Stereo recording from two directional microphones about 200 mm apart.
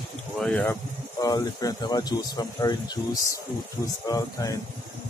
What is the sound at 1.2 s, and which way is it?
Speech, 20° left (ahead or behind).